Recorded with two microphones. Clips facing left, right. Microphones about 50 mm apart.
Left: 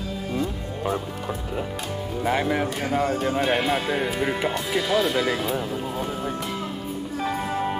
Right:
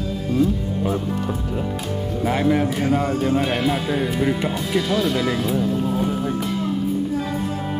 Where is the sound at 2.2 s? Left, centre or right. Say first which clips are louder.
Right 4 dB; centre.